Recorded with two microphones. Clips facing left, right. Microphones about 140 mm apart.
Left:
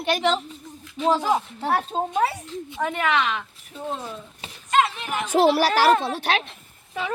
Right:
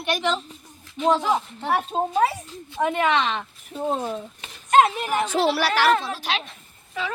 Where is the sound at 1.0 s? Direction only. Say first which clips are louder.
Even; 5° left (ahead or behind).